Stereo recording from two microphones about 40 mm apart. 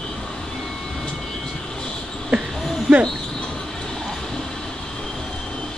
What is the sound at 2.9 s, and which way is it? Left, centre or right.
Speech, centre.